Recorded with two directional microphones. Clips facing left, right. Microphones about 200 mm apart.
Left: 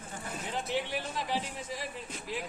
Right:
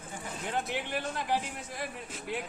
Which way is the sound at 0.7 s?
55° right (ahead or behind).